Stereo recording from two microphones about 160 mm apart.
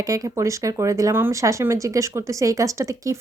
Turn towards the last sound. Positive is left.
turn(degrees=-20)  # may be behind; listen again after turning